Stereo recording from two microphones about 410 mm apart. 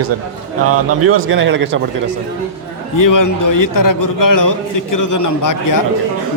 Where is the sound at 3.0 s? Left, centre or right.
Left.